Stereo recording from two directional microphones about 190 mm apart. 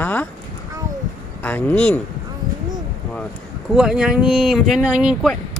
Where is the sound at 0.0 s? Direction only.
10° left (ahead or behind).